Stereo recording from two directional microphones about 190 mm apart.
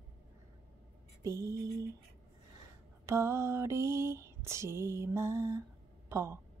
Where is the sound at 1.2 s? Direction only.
15° right (ahead or behind).